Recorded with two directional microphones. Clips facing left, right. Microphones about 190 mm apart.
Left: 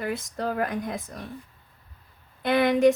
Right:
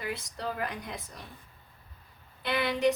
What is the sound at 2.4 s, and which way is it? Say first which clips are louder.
Speech: left 8 dB; 45° left (ahead or behind).